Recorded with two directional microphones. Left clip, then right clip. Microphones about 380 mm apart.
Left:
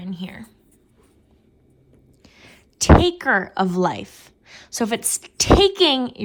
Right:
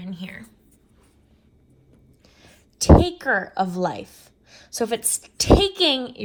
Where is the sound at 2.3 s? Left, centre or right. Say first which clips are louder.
Left 5 dB; centre.